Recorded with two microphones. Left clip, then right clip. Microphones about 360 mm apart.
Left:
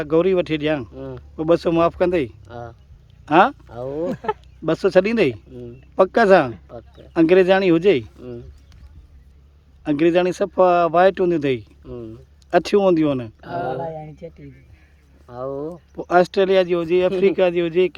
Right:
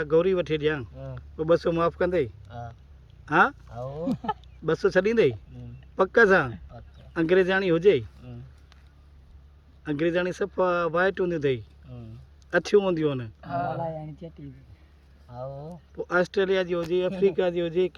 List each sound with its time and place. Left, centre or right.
0.0 s speech: centre
9.8 s speech: centre
15.5 s speech: left
16.0 s speech: centre